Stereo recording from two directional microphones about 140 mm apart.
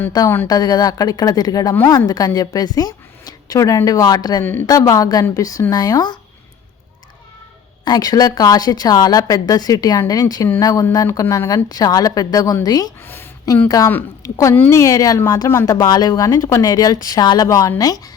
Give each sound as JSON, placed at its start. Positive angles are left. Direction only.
{"t": 0.4, "sound": "speech", "side_deg": 30}
{"t": 7.9, "sound": "a woman's voice", "side_deg": 30}